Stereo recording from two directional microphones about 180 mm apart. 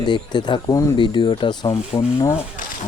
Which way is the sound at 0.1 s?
25° left (ahead or behind).